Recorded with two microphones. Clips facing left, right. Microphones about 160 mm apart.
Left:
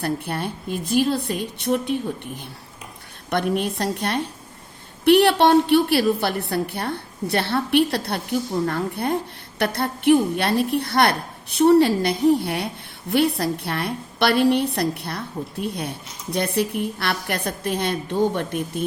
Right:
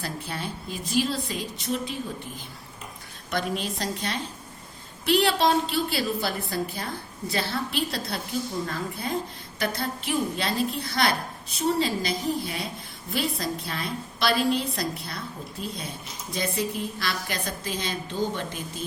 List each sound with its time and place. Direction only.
0.0 s a woman's voice: 60° left (ahead or behind)